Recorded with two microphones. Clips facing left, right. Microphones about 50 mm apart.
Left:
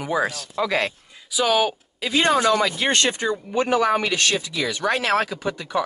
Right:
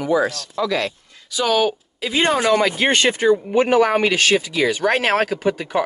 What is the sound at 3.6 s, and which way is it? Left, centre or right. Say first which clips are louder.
Speech: right 3 dB; right.